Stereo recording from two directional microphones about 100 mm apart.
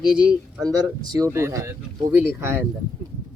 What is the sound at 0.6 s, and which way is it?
Speech, 40° right (ahead or behind).